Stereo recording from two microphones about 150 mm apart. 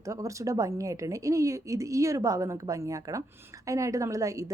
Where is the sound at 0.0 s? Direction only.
20° right (ahead or behind).